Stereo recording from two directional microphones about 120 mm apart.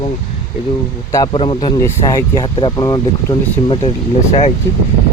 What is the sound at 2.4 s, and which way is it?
Speech, 40° left (ahead or behind).